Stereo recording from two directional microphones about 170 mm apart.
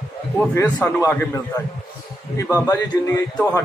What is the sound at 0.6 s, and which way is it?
A man's voice, 10° left (ahead or behind).